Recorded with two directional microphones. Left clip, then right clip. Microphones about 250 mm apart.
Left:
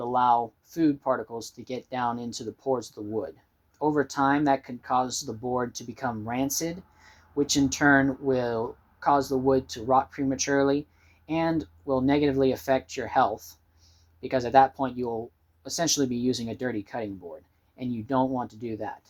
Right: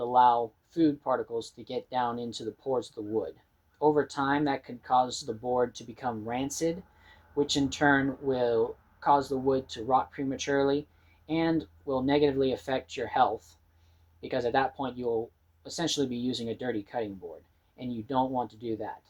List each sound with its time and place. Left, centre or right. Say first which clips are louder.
0.0 s speech: even; left